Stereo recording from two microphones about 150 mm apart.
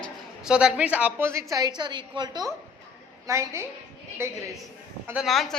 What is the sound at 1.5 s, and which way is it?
A woman's voice, 25° right (ahead or behind).